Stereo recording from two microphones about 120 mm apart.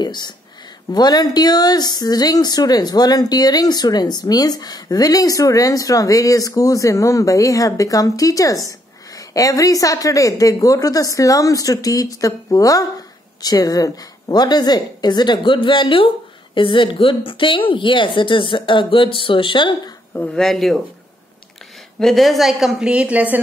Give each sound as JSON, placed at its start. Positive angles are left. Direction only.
{"t": 0.0, "sound": "speech", "side_deg": 35}
{"t": 20.3, "sound": "a woman's voice", "side_deg": 0}
{"t": 22.0, "sound": "a woman's voice", "side_deg": 0}